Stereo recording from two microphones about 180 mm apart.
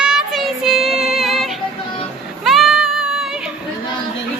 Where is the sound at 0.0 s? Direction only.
5° right (ahead or behind).